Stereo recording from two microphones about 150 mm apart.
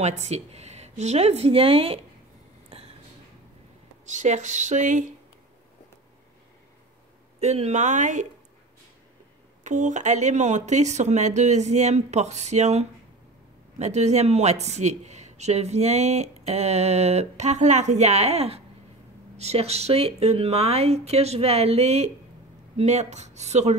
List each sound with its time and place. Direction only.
0.0 s speech: 50° right (ahead or behind)
4.1 s speech: 55° right (ahead or behind)
7.3 s speech: 45° right (ahead or behind)
9.6 s speech: 55° right (ahead or behind)